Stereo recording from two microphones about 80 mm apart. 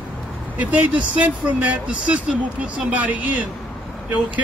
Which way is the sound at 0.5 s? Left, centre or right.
Centre.